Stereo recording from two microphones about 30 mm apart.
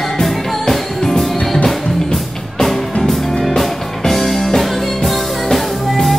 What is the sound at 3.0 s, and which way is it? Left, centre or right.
Music, centre.